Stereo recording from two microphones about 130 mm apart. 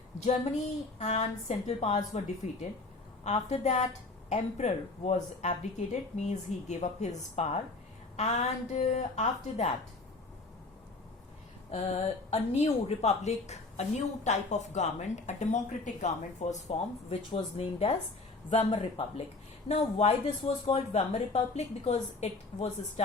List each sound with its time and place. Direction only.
0.3 s a woman's voice: 60° left (ahead or behind)
12.3 s a woman's voice: 55° left (ahead or behind)
19.6 s a woman's voice: 55° left (ahead or behind)